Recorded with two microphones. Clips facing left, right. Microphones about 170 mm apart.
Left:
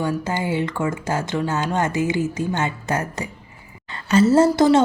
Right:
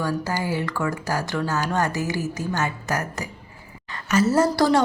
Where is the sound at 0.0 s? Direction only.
25° left (ahead or behind).